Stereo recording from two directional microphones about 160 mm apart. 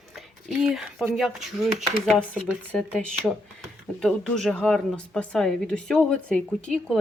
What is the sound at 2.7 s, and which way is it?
Speech, 5° left (ahead or behind).